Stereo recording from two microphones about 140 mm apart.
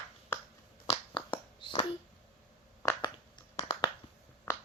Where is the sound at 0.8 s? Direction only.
40° left (ahead or behind).